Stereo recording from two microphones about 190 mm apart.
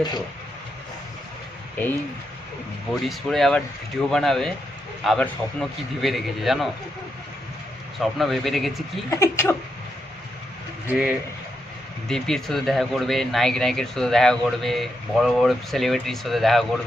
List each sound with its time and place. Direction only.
2.9 s speech: centre (ahead or behind)
7.9 s speech: centre (ahead or behind)
9.0 s speech: 15° left (ahead or behind)
10.9 s speech: 5° right (ahead or behind)